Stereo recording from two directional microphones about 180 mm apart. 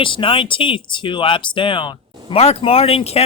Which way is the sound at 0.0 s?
30° left (ahead or behind).